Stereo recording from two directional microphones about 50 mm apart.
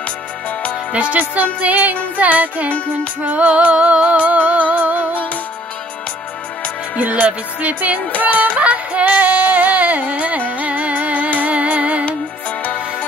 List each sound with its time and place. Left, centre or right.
1.1 s music: right
7.0 s music: right
9.1 s music: right
12.1 s music: left